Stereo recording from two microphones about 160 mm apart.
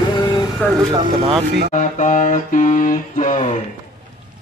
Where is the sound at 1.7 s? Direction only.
50° left (ahead or behind).